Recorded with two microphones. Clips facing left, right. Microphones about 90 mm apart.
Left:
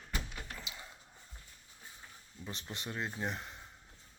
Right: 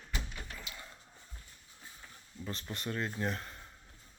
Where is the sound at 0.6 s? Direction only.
15° left (ahead or behind).